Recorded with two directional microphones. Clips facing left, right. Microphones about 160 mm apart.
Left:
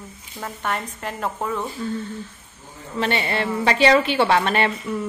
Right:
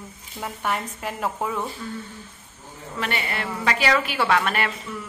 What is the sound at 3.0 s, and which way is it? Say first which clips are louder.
A woman's voice: left 6 dB; 30° left (ahead or behind).